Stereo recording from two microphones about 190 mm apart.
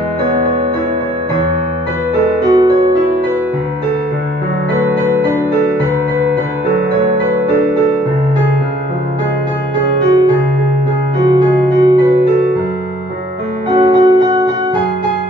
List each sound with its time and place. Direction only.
2.5 s music: 20° right (ahead or behind)
11.2 s music: 25° right (ahead or behind)
13.7 s music: 25° right (ahead or behind)